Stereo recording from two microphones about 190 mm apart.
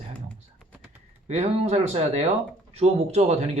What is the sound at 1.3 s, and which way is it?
Speech, 35° right (ahead or behind).